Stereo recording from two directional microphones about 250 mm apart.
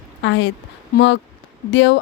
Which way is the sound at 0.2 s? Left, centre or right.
Left.